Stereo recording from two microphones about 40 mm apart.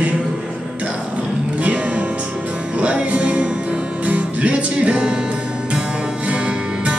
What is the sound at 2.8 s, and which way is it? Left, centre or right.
Music, right.